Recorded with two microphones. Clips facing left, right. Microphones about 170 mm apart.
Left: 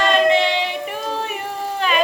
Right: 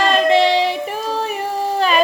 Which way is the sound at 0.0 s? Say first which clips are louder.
Right 2 dB; 35° right (ahead or behind).